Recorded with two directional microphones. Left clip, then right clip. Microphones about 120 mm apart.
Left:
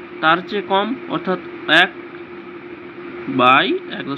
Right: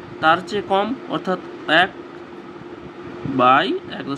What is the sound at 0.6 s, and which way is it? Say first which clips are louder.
Speech: left 1 dB; centre (ahead or behind).